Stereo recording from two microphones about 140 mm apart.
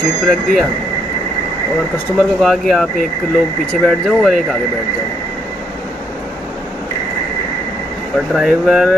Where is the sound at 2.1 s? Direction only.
Centre (ahead or behind).